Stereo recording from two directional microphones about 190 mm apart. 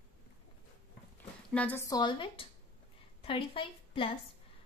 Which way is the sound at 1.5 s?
10° left (ahead or behind).